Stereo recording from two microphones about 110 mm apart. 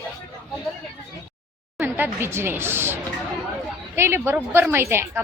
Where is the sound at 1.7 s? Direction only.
20° right (ahead or behind).